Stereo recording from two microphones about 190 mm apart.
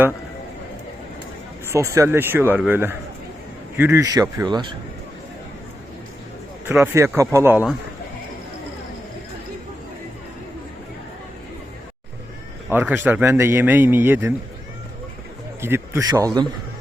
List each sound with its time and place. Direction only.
1.7 s a man's voice: 15° right (ahead or behind)
6.7 s a man's voice: 15° right (ahead or behind)
12.6 s a man's voice: 10° right (ahead or behind)
15.6 s a man's voice: 10° right (ahead or behind)